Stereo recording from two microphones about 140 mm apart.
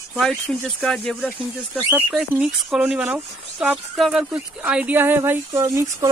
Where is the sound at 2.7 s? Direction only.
10° right (ahead or behind).